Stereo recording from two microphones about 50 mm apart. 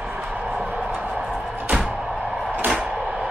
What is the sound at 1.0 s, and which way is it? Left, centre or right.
Music, centre.